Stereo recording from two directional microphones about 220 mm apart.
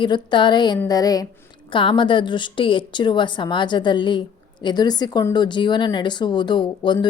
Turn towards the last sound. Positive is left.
turn(degrees=20)  # may be behind; listen again after turning